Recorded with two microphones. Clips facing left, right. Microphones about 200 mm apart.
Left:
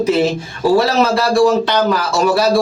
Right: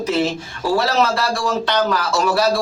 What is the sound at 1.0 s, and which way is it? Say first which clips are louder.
Speech: left 8 dB; 10° left (ahead or behind).